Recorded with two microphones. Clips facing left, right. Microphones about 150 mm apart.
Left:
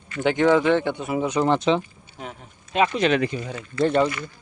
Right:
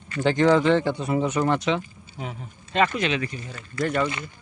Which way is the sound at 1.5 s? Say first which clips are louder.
Left 3 dB; 30° left (ahead or behind).